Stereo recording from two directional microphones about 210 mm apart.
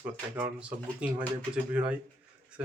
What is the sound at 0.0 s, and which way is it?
Speech, 5° right (ahead or behind).